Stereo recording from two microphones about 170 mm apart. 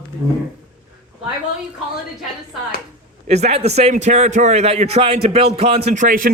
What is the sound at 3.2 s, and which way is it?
A man's voice, 40° right (ahead or behind).